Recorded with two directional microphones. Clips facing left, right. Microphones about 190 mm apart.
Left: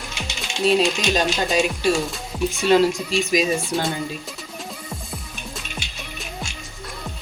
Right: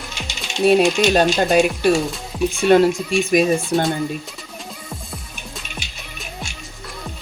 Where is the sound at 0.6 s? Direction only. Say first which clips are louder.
Right 5 dB; 60° right (ahead or behind).